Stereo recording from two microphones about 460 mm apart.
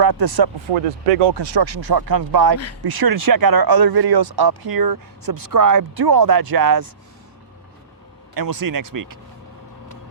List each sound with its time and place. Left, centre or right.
0.0 s speech: right
0.3 s speech: right
1.2 s speech: right
8.4 s speech: right